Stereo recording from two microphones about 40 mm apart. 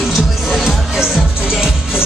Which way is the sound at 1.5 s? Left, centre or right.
Centre.